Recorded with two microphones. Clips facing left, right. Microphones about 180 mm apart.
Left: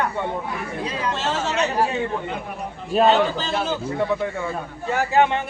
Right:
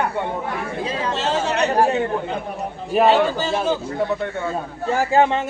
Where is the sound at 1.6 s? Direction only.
50° right (ahead or behind).